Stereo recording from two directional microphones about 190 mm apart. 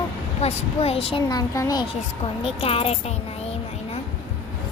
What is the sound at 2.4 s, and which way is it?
Speech, 30° left (ahead or behind).